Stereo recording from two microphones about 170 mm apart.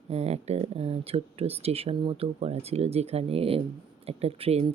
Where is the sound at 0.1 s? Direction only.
40° right (ahead or behind).